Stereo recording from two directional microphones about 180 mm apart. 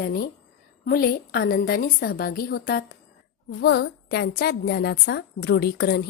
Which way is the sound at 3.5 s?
70° left (ahead or behind).